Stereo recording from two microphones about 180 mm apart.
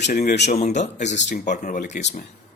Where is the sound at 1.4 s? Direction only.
45° left (ahead or behind).